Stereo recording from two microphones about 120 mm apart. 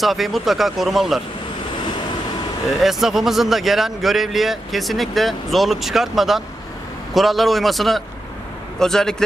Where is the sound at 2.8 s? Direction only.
5° right (ahead or behind).